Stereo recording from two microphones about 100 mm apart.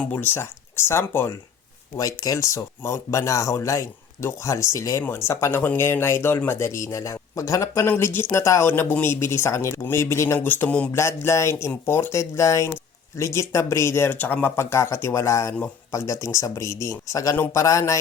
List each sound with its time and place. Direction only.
0.0 s speech: 15° left (ahead or behind)
2.0 s speech: 35° left (ahead or behind); by 10.8 s 15° left (ahead or behind)
10.9 s speech: 30° left (ahead or behind)